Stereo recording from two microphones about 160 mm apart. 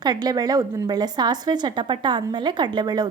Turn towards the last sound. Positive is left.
turn(degrees=-25)  # may be behind; listen again after turning